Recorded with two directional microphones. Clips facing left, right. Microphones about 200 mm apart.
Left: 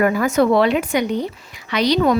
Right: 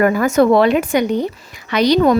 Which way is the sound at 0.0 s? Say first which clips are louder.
Right 3 dB; 50° right (ahead or behind).